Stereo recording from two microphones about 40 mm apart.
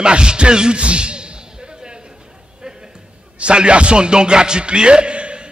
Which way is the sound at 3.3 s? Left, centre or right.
Right.